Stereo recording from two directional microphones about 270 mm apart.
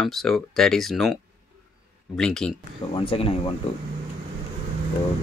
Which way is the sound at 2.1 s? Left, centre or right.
Centre.